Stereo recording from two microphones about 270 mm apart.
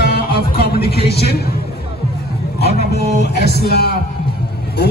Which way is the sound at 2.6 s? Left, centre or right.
Left.